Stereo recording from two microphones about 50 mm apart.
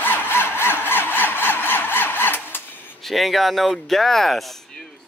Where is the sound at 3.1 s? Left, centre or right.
Centre.